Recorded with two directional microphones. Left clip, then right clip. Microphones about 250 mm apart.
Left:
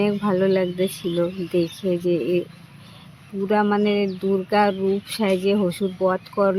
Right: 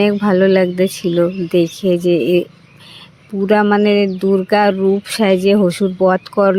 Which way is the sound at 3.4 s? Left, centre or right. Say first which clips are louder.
Right 7 dB; right.